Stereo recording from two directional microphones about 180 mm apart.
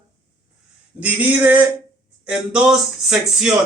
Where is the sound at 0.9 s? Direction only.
10° right (ahead or behind).